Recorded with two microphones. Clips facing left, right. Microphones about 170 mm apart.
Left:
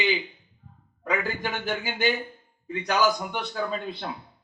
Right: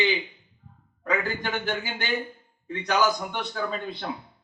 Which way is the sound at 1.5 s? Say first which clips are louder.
Right 1 dB; centre (ahead or behind).